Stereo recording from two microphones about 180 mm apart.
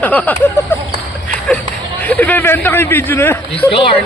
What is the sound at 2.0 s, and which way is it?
A man's voice, 10° left (ahead or behind).